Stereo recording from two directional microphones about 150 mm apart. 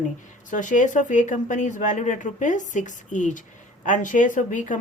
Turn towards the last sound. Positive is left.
turn(degrees=60)  # may be behind; listen again after turning